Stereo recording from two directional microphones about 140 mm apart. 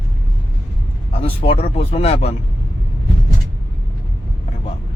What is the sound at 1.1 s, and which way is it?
Speech, 45° left (ahead or behind).